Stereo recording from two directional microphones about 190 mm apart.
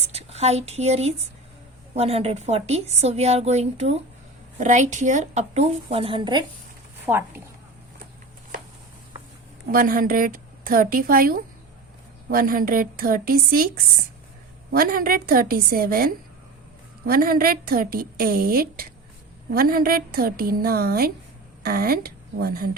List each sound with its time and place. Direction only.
0.0 s speech: 35° right (ahead or behind)
7.0 s a woman's voice: 10° right (ahead or behind)
9.6 s speech: 50° right (ahead or behind)
14.7 s a woman's voice: 50° right (ahead or behind)